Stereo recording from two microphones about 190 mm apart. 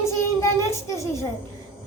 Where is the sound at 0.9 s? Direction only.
15° left (ahead or behind).